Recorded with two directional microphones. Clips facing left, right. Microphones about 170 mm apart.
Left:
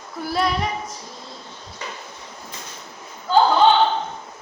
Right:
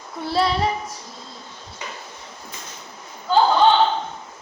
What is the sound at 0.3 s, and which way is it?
Speech, 30° right (ahead or behind).